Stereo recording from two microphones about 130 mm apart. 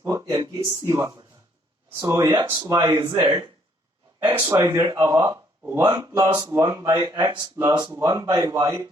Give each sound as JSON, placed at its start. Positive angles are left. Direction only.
{"t": 0.0, "sound": "speech", "side_deg": -25}
{"t": 0.9, "sound": "speech", "side_deg": -20}